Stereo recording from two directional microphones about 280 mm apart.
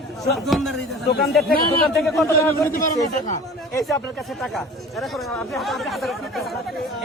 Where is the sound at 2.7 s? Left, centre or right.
Left.